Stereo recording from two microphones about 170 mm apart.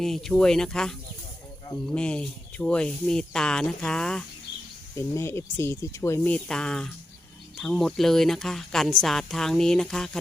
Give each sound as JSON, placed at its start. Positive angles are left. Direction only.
{"t": 0.0, "sound": "speech", "side_deg": 0}
{"t": 4.9, "sound": "speech", "side_deg": 15}